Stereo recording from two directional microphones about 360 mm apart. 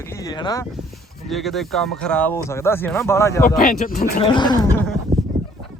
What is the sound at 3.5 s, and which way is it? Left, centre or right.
Speech, left.